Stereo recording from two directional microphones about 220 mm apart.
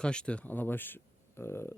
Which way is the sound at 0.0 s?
5° left (ahead or behind).